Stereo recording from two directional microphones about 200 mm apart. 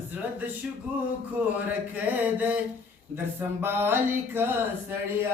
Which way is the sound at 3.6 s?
10° right (ahead or behind).